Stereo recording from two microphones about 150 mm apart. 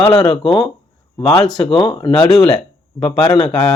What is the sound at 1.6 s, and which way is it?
Speech, 35° left (ahead or behind).